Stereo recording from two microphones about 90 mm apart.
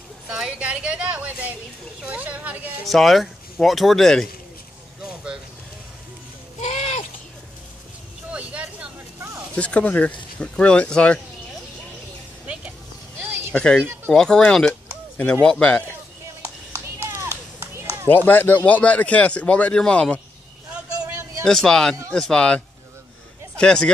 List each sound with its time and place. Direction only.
0.3 s a sound: 10° right (ahead or behind)
2.9 s speech: centre (ahead or behind)
5.0 s vehicle: 10° right (ahead or behind)
8.3 s vehicle: 15° right (ahead or behind)
9.6 s speech: 15° left (ahead or behind)
13.5 s speech: 10° left (ahead or behind)
17.0 s run: 30° right (ahead or behind)
18.0 s speech: 20° left (ahead or behind)
21.5 s speech: 5° left (ahead or behind)
23.6 s speech: 10° left (ahead or behind)